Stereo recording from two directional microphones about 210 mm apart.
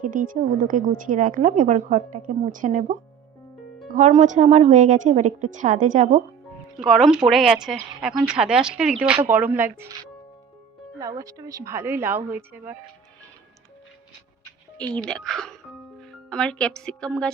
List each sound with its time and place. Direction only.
0.0 s a woman's voice: 40° right (ahead or behind)
6.8 s a woman's voice: centre (ahead or behind)
11.0 s a woman's voice: 15° right (ahead or behind)
14.8 s speech: 5° left (ahead or behind)